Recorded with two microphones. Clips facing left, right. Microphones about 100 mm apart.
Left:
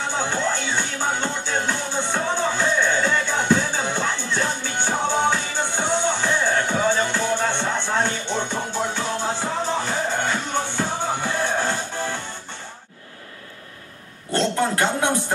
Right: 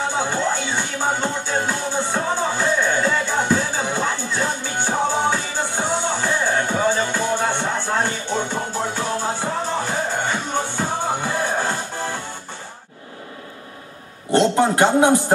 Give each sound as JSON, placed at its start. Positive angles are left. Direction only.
{"t": 0.1, "sound": "music", "side_deg": -10}
{"t": 14.3, "sound": "speech", "side_deg": -20}